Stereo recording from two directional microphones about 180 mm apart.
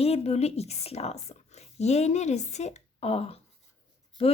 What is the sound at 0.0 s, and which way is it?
A woman's voice, 35° left (ahead or behind).